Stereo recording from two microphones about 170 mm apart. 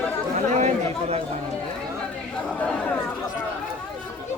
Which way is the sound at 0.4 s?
40° right (ahead or behind).